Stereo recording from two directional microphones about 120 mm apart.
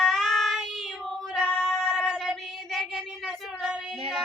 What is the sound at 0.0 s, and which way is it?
Child singing, centre (ahead or behind).